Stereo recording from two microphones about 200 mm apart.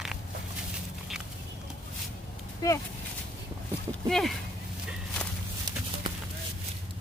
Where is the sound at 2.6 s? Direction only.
15° left (ahead or behind).